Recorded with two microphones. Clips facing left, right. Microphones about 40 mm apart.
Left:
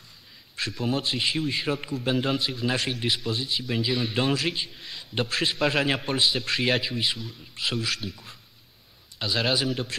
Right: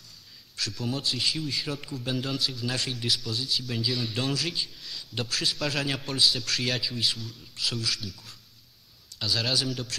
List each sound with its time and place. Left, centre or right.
0.6 s a man's voice: left